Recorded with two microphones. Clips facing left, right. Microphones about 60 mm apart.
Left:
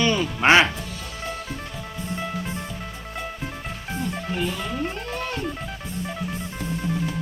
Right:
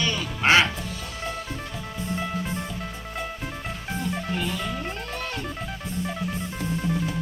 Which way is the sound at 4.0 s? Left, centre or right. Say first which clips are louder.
Left 2 dB; centre.